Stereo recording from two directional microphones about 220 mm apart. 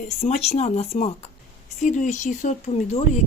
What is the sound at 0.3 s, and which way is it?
A woman's voice, 30° left (ahead or behind).